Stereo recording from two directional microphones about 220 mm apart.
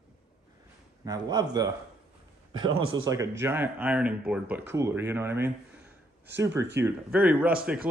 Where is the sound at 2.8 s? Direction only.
65° right (ahead or behind).